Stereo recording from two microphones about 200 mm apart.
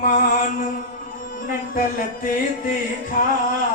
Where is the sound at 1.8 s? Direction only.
45° left (ahead or behind).